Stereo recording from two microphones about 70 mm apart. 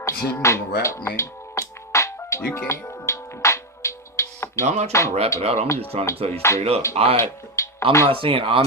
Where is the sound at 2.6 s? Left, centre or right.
Left.